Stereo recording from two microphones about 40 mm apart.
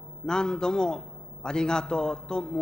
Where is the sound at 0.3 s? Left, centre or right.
Centre.